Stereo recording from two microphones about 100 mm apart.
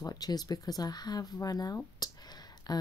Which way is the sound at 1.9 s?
40° left (ahead or behind).